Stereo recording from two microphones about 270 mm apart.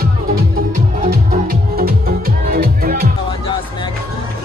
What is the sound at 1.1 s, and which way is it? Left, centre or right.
Music, right.